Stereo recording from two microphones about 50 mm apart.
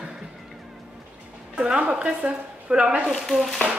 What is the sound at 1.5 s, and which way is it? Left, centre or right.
A woman's voice, centre.